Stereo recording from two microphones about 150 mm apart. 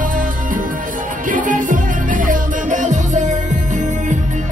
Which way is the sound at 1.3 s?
60° right (ahead or behind).